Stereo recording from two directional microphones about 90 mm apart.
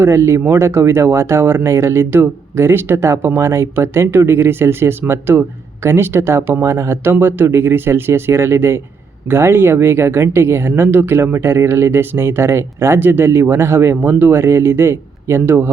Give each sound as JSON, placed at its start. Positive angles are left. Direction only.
{"t": 0.0, "sound": "speech", "side_deg": -30}